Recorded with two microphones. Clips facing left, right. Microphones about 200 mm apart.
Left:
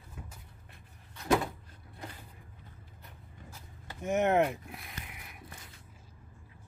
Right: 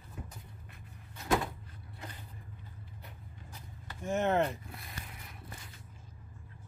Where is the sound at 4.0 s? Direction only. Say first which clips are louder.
Left 3 dB; 20° left (ahead or behind).